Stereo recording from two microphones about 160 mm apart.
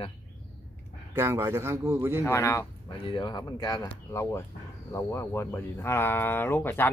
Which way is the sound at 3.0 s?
30° left (ahead or behind).